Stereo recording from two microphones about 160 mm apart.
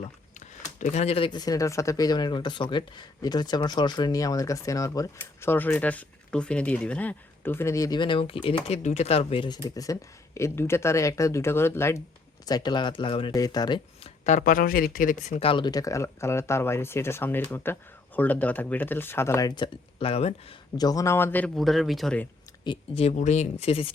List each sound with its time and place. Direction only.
0.0 s speech: 45° left (ahead or behind); by 14.1 s 30° left (ahead or behind)
14.3 s speech: 55° left (ahead or behind)
15.4 s speech: 35° left (ahead or behind)
20.7 s speech: 25° left (ahead or behind); by 22.3 s 5° left (ahead or behind)
22.6 s speech: 35° left (ahead or behind)